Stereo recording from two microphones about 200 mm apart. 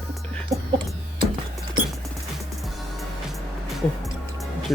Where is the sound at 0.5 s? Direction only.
15° right (ahead or behind).